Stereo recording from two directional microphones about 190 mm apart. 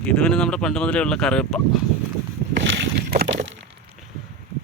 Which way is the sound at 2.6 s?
70° right (ahead or behind).